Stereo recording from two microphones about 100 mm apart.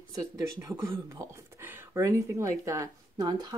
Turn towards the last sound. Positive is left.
turn(degrees=-30)  # may be behind; listen again after turning